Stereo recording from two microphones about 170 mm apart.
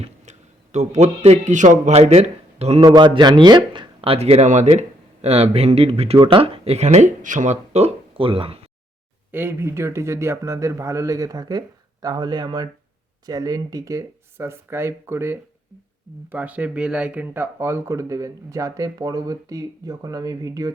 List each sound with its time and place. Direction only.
0.0 s a man's voice: 40° right (ahead or behind)
2.8 s speech: 25° right (ahead or behind)
9.3 s speech: 10° right (ahead or behind)